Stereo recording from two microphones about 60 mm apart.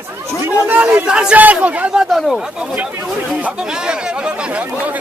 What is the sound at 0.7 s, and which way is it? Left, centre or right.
Speech, right.